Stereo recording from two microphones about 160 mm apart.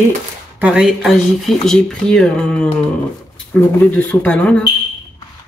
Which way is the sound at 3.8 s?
10° left (ahead or behind).